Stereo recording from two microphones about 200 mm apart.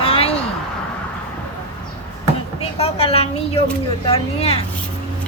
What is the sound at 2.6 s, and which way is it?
A woman's voice, 30° left (ahead or behind).